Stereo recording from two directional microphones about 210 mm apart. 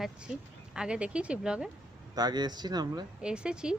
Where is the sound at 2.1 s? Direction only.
20° right (ahead or behind).